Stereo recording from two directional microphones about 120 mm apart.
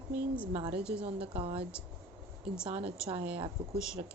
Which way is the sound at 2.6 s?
50° right (ahead or behind).